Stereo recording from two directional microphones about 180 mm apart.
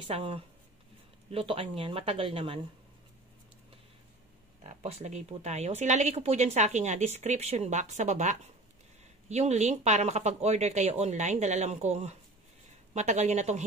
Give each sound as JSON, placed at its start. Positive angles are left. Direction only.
{"t": 0.1, "sound": "speech", "side_deg": -35}
{"t": 4.6, "sound": "speech", "side_deg": -35}